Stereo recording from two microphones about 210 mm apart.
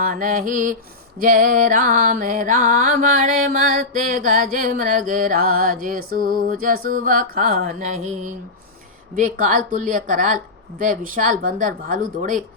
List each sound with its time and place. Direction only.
0.0 s music: 40° right (ahead or behind)